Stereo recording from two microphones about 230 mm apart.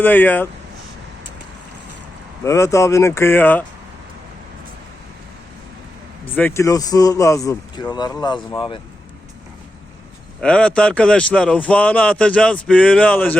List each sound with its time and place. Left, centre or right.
0.0 s speech: centre
2.4 s speech: centre
6.2 s speech: centre
10.4 s a man's voice: centre